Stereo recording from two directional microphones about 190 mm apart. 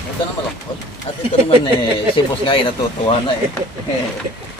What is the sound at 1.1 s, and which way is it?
Speech, 35° left (ahead or behind).